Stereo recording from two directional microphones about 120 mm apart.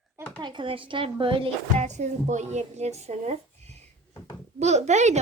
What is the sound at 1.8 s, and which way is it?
A woman's voice, 75° right (ahead or behind).